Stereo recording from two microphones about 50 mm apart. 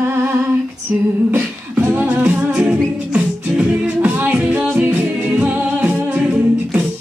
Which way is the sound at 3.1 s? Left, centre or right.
Right.